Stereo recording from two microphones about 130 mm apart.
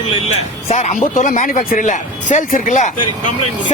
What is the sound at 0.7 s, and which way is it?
Speech, 65° left (ahead or behind).